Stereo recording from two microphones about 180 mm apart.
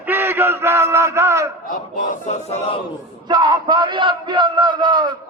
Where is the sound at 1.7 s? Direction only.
50° left (ahead or behind).